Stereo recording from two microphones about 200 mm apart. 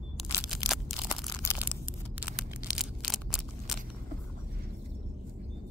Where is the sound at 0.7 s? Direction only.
Centre (ahead or behind).